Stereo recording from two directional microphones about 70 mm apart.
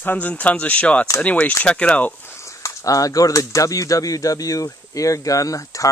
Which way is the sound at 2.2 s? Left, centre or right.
Left.